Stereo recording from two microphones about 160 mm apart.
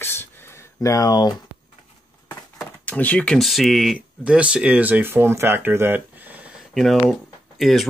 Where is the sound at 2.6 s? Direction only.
10° left (ahead or behind); by 6.0 s 10° right (ahead or behind).